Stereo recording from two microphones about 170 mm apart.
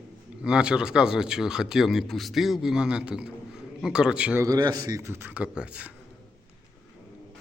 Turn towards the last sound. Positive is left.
turn(degrees=-5)  # may be behind; listen again after turning